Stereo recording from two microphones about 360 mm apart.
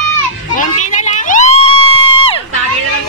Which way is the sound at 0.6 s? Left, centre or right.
Left.